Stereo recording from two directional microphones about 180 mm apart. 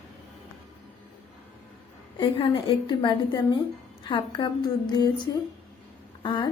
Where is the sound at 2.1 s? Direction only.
30° left (ahead or behind).